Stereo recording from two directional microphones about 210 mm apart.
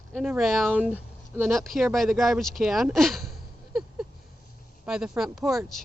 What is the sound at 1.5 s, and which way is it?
Speech, centre (ahead or behind).